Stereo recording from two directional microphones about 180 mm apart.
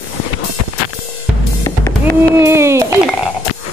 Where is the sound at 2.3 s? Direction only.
15° right (ahead or behind).